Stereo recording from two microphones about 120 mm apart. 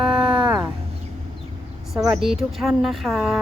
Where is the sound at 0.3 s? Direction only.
40° right (ahead or behind).